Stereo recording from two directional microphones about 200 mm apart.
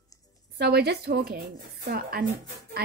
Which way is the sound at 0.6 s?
55° right (ahead or behind).